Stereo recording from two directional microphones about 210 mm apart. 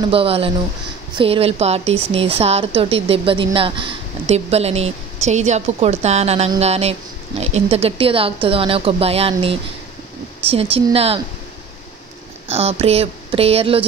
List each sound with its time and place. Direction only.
0.1 s a woman's voice: 25° right (ahead or behind)
12.4 s a woman's voice: 30° right (ahead or behind)